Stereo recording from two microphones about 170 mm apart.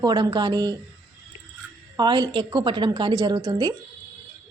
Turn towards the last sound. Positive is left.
turn(degrees=-25)  # may be behind; listen again after turning